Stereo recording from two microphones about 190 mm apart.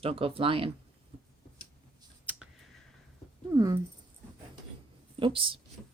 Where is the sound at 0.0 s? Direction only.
30° right (ahead or behind).